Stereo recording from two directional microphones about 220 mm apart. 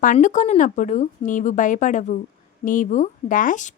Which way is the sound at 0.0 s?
35° left (ahead or behind).